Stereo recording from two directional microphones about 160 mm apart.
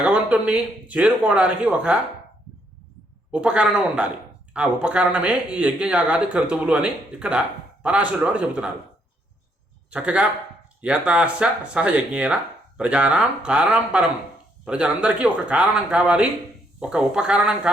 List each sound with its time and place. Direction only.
0.0 s speech: 10° right (ahead or behind)
3.3 s speech: 5° right (ahead or behind)
9.9 s speech: 5° right (ahead or behind)